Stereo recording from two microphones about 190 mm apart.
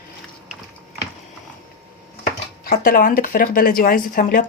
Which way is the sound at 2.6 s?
50° left (ahead or behind).